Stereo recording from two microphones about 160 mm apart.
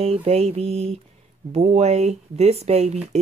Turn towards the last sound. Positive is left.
turn(degrees=-40)  # may be behind; listen again after turning